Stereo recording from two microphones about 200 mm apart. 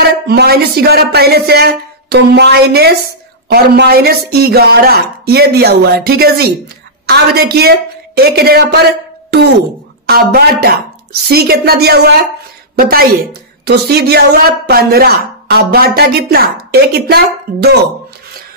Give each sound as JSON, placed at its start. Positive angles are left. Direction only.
{"t": 0.0, "sound": "speech", "side_deg": -55}
{"t": 10.0, "sound": "a woman's voice", "side_deg": -50}